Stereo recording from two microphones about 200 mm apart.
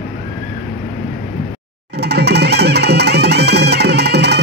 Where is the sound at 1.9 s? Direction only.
55° right (ahead or behind).